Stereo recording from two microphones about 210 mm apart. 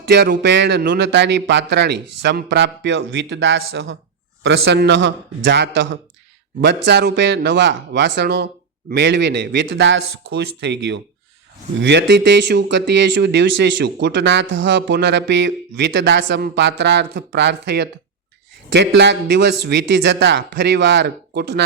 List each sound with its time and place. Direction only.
0.0 s speech: 50° right (ahead or behind)
20.1 s speech: 55° right (ahead or behind)